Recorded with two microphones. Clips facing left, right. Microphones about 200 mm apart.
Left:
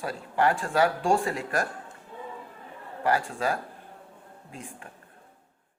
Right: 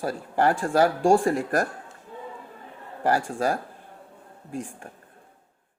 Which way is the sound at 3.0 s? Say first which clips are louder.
Right 2 dB; 45° right (ahead or behind).